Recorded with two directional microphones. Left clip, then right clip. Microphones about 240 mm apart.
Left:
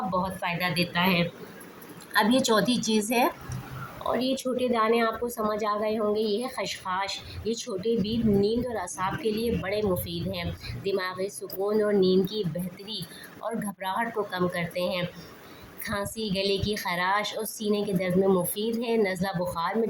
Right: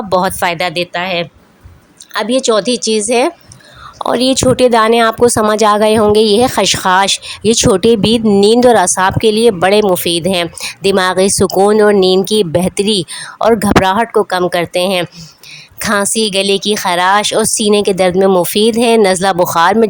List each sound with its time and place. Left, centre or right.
0.1 s speech: right
2.1 s a woman's voice: right